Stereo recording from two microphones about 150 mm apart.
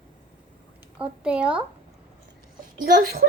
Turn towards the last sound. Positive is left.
turn(degrees=-90)